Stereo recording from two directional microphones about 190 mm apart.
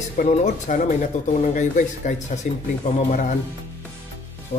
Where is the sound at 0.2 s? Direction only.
40° left (ahead or behind).